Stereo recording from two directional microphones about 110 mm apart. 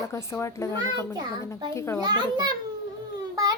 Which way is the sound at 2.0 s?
40° right (ahead or behind).